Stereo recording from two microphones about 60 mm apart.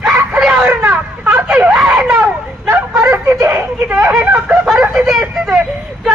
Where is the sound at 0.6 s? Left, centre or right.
Right.